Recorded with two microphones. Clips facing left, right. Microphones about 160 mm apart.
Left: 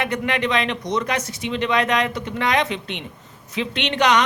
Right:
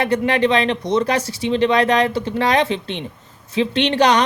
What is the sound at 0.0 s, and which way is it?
Speech, 30° right (ahead or behind).